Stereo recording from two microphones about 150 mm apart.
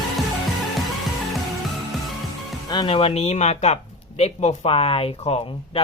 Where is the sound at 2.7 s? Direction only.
35° left (ahead or behind).